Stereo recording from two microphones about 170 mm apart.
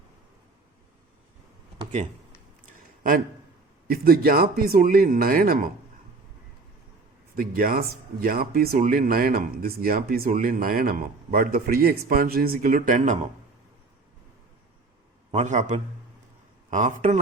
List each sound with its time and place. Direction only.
3.8 s speech: 60° right (ahead or behind)
7.3 s speech: 60° right (ahead or behind)
15.3 s speech: 40° right (ahead or behind)